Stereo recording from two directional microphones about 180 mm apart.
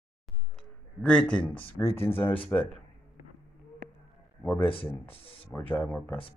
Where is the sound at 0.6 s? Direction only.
5° left (ahead or behind).